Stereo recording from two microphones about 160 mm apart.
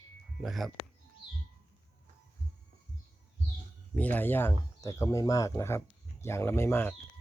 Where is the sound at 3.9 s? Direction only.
10° left (ahead or behind).